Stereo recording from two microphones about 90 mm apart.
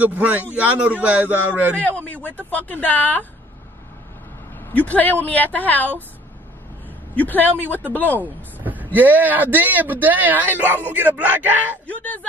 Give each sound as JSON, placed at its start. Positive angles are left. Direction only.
{"t": 0.0, "sound": "speech", "side_deg": -20}
{"t": 1.8, "sound": "a woman's voice", "side_deg": 15}
{"t": 4.6, "sound": "a woman's voice", "side_deg": 15}
{"t": 7.2, "sound": "a woman's voice", "side_deg": 20}
{"t": 8.5, "sound": "vehicle", "side_deg": -20}
{"t": 8.9, "sound": "speech", "side_deg": -20}
{"t": 11.9, "sound": "speech", "side_deg": 15}